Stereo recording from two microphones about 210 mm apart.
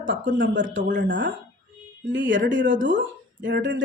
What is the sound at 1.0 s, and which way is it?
Speech, 60° right (ahead or behind).